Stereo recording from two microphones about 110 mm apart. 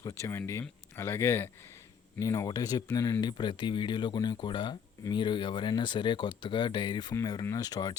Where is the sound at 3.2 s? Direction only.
45° left (ahead or behind).